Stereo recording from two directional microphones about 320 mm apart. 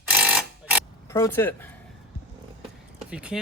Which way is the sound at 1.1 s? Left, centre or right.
Centre.